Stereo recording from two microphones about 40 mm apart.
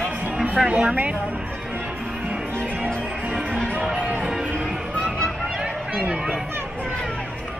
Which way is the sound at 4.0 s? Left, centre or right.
Right.